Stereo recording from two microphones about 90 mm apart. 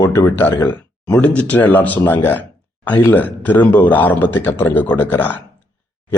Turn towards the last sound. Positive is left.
turn(degrees=20)  # may be behind; listen again after turning